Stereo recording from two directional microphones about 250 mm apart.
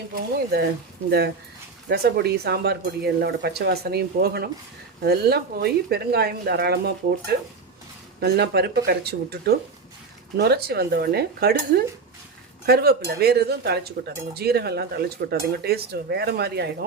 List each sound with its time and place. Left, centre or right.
0.1 s speech: right
1.9 s speech: right
12.6 s speech: right